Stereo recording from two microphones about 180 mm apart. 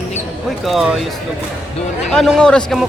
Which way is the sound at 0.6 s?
Centre (ahead or behind).